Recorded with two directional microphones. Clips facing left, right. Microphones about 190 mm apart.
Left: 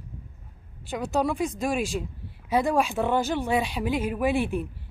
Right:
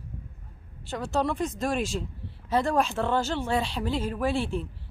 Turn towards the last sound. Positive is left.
turn(degrees=15)  # may be behind; listen again after turning